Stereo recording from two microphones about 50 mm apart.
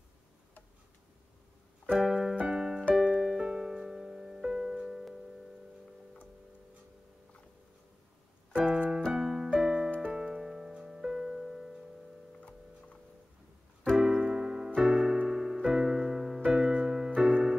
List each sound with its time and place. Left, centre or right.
1.9 s keyboard: centre
2.4 s music: centre
8.5 s keyboard: centre
9.9 s music: centre
12.4 s tick-tock: left
13.9 s keyboard: centre
15.2 s music: centre